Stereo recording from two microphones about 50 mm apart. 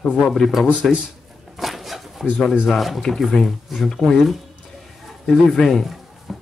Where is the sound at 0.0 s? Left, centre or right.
Left.